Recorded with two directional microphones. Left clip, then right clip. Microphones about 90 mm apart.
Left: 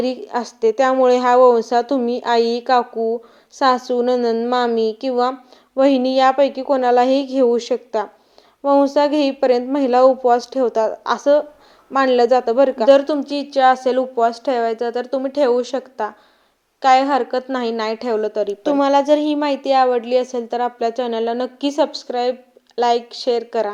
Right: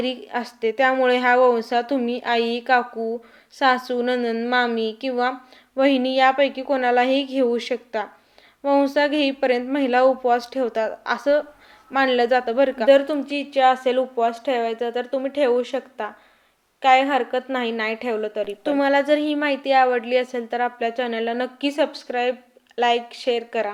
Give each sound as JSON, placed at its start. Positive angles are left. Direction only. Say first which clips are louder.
{"t": 0.0, "sound": "a woman's voice", "louder": "left 4 dB", "side_deg": 25}
{"t": 12.9, "sound": "a woman's voice", "louder": "left 3 dB", "side_deg": 65}
{"t": 15.7, "sound": "a woman's voice", "louder": "left 4 dB", "side_deg": 50}
{"t": 17.0, "sound": "a woman's voice", "louder": "left 3 dB", "side_deg": 70}
{"t": 18.6, "sound": "a woman's voice", "louder": "left 3 dB", "side_deg": 45}
{"t": 22.2, "sound": "a sound", "louder": "left 2 dB", "side_deg": -10}
{"t": 23.5, "sound": "a woman's voice", "louder": "left 4 dB", "side_deg": 55}